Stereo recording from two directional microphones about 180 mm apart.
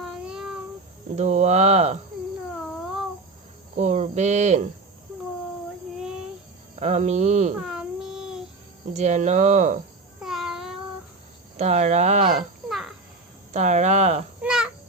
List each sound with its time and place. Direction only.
0.0 s child singing: centre (ahead or behind)
1.1 s speech: 40° right (ahead or behind)
3.8 s speech: 40° right (ahead or behind)
6.7 s speech: 40° right (ahead or behind)
7.5 s child singing: 5° right (ahead or behind)
8.9 s speech: 40° right (ahead or behind)
10.2 s a sound: centre (ahead or behind)
11.5 s speech: 40° right (ahead or behind)
12.6 s a sound: centre (ahead or behind)
13.5 s speech: 40° right (ahead or behind)
14.4 s babbling: 5° right (ahead or behind)